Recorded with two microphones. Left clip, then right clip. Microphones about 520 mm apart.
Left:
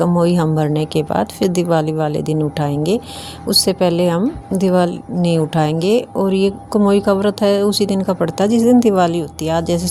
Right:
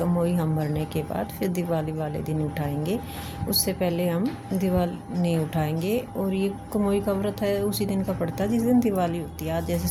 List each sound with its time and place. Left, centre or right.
0.0 s a woman's voice: right